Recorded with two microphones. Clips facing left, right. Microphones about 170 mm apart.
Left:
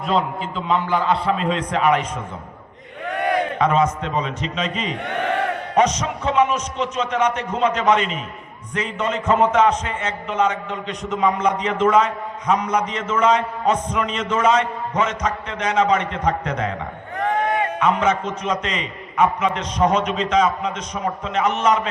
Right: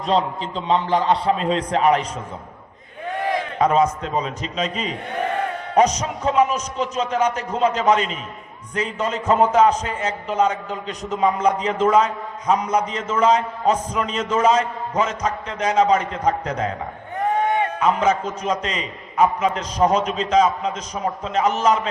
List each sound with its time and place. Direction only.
0.0 s a man's voice: 35° right (ahead or behind)
3.2 s a sound: 65° left (ahead or behind)
3.6 s a man's voice: 35° right (ahead or behind)
5.0 s battle cry: 75° left (ahead or behind)
5.7 s a man's voice: 35° right (ahead or behind)
17.7 s a man's voice: 35° right (ahead or behind)